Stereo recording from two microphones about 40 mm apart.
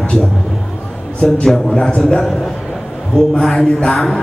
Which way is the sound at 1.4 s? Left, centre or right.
Centre.